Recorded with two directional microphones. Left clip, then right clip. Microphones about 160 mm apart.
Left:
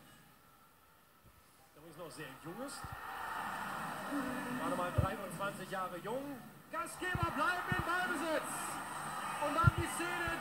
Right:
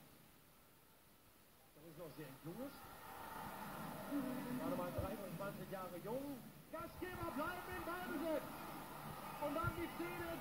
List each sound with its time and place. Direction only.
2.0 s speech: 30° left (ahead or behind)
8.6 s a sound: 30° left (ahead or behind)
9.6 s speech: 30° left (ahead or behind)